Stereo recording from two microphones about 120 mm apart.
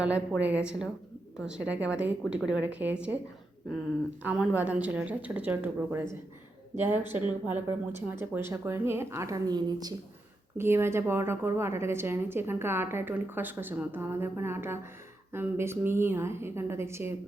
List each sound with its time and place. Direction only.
0.0 s a woman's voice: 10° right (ahead or behind)
4.2 s a woman's voice: 10° right (ahead or behind); by 9.9 s 35° right (ahead or behind)
10.6 s a woman's voice: 20° right (ahead or behind)